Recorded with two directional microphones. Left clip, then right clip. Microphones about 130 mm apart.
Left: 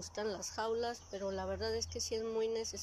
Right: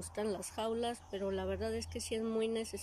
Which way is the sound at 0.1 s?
20° right (ahead or behind).